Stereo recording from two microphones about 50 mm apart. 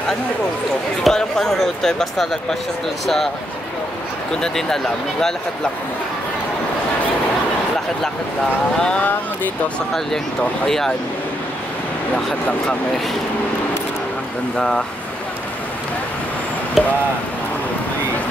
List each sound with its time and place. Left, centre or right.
1.0 s speech: centre
4.4 s speech: centre
8.7 s speech: centre
10.6 s speech: centre
14.6 s speech: centre
16.8 s speech: centre